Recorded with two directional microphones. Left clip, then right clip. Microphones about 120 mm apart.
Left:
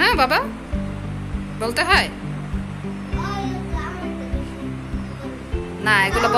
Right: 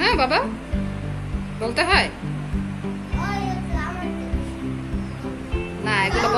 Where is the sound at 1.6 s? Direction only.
5° right (ahead or behind).